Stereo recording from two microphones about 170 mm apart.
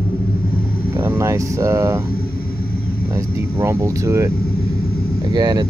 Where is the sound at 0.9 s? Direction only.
10° right (ahead or behind).